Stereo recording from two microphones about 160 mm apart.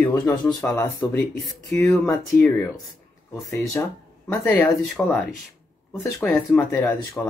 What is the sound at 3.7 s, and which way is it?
Speech, 15° left (ahead or behind).